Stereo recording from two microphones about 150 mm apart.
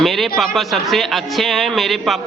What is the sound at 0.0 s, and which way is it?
A man's voice, centre (ahead or behind).